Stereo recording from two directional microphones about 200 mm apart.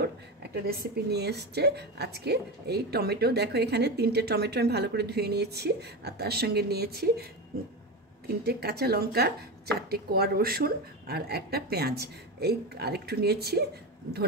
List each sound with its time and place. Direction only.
0.7 s a woman's voice: 55° right (ahead or behind)
8.5 s a woman's voice: 55° right (ahead or behind)